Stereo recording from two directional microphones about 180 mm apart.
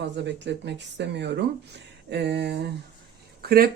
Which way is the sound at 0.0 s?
75° right (ahead or behind).